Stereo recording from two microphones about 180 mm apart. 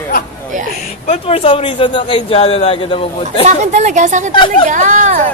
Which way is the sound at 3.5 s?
40° right (ahead or behind).